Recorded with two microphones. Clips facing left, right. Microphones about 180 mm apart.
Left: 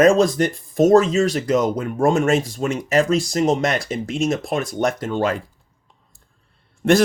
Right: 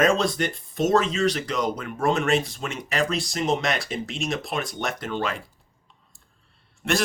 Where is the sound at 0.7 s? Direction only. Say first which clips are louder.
Left 8 dB; 45° left (ahead or behind).